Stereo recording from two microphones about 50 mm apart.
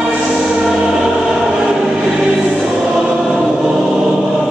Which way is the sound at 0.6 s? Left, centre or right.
Centre.